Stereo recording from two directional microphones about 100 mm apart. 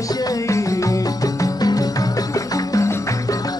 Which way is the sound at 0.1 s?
40° left (ahead or behind).